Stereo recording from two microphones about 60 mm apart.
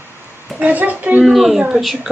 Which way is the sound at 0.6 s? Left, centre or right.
Right.